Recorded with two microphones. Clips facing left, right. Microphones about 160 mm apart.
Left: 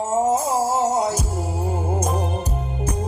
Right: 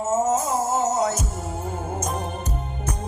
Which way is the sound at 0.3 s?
30° left (ahead or behind).